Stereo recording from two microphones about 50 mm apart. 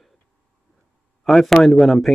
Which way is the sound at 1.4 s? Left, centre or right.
Centre.